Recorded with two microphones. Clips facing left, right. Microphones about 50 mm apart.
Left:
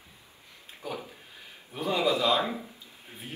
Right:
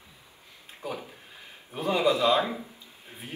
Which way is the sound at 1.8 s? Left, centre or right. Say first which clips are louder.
Right 2 dB; right.